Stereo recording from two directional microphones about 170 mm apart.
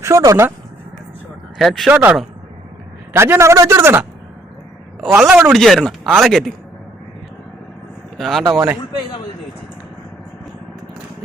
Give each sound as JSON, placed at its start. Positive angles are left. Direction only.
{"t": 0.0, "sound": "speech", "side_deg": -15}
{"t": 1.5, "sound": "a man's voice", "side_deg": 0}
{"t": 5.2, "sound": "speech", "side_deg": -5}
{"t": 8.2, "sound": "speech", "side_deg": 0}
{"t": 8.4, "sound": "a man's voice", "side_deg": -15}